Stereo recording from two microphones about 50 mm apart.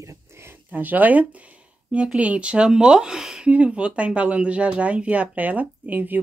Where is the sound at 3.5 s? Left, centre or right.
Right.